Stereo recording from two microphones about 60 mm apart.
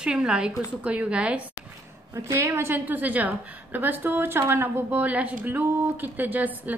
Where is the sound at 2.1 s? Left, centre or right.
Right.